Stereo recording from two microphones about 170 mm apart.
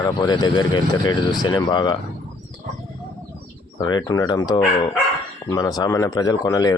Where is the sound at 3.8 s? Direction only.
25° left (ahead or behind).